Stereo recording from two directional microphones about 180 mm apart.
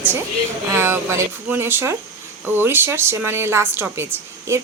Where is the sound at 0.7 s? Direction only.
15° right (ahead or behind).